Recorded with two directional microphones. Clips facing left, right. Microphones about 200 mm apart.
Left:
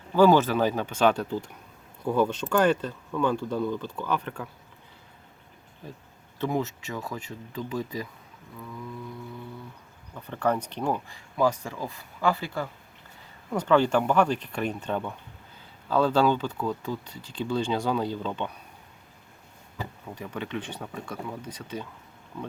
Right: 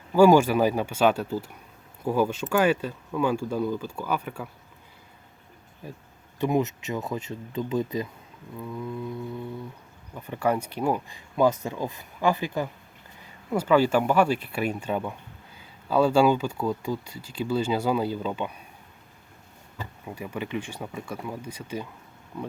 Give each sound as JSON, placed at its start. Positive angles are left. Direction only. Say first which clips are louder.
{"t": 0.1, "sound": "speech", "louder": "right 2 dB", "side_deg": -10}
{"t": 6.4, "sound": "speech", "louder": "right 4 dB", "side_deg": -20}
{"t": 10.2, "sound": "speech", "louder": "right 1 dB", "side_deg": -10}
{"t": 11.3, "sound": "speech", "louder": "right 3 dB", "side_deg": -20}
{"t": 20.1, "sound": "speech", "louder": "right 3 dB", "side_deg": -10}